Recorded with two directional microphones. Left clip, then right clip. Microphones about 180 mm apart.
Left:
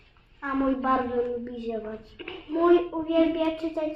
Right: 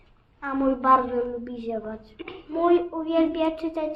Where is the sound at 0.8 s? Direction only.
20° right (ahead or behind).